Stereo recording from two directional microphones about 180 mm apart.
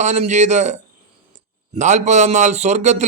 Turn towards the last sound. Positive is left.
turn(degrees=-40)  # may be behind; listen again after turning